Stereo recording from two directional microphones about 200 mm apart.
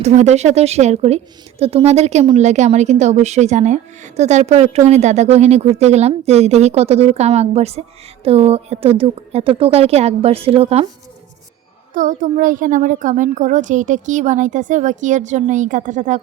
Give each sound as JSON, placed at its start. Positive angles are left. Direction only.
{"t": 0.0, "sound": "a woman's voice", "side_deg": -35}
{"t": 11.9, "sound": "a woman's voice", "side_deg": -40}